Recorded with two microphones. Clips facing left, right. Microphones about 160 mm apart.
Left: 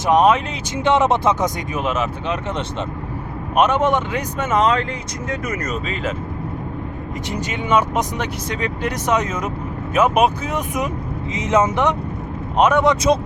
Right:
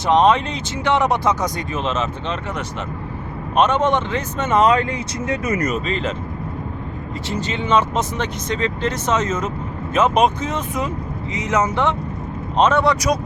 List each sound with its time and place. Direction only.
0.1 s speech: 10° left (ahead or behind)
0.9 s speech: 20° left (ahead or behind)
3.5 s speech: 10° left (ahead or behind)
5.8 s speech: 5° left (ahead or behind)
7.3 s speech: 15° left (ahead or behind)
11.3 s speech: 20° left (ahead or behind)